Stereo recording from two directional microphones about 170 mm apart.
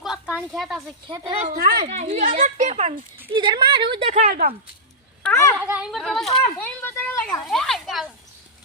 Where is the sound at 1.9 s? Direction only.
40° right (ahead or behind).